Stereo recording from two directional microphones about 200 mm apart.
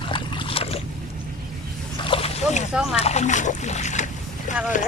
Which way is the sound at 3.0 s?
35° left (ahead or behind).